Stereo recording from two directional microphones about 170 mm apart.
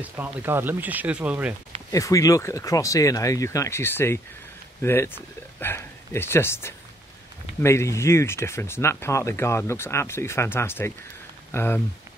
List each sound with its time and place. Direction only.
0.0 s speech: 10° right (ahead or behind)
1.9 s speech: 20° left (ahead or behind)